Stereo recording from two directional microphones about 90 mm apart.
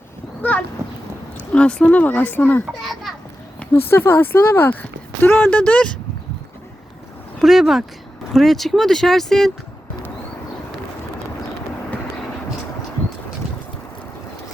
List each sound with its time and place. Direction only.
0.4 s a sound: 20° left (ahead or behind)
1.5 s speech: 10° left (ahead or behind)
2.6 s a child's voice: centre (ahead or behind)
3.8 s speech: 25° left (ahead or behind)
7.4 s speech: centre (ahead or behind)